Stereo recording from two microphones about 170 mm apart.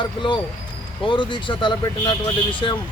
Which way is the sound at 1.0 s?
30° left (ahead or behind).